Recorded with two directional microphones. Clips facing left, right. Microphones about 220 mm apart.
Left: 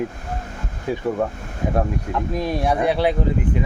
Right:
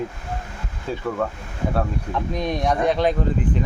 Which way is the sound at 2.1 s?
5° left (ahead or behind).